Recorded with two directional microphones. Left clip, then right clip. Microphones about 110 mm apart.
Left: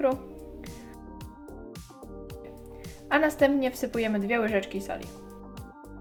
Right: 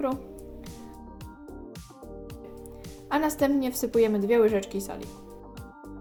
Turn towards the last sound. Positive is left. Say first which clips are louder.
# right 1 dB
turn(degrees=-40)  # may be behind; listen again after turning